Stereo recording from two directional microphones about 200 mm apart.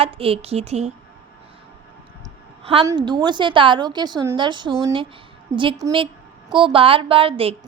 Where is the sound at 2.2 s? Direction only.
30° right (ahead or behind).